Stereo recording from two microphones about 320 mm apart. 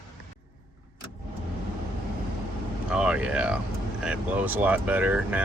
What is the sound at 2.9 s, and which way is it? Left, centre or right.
Speech, centre.